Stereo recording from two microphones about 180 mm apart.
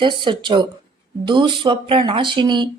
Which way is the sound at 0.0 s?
25° right (ahead or behind).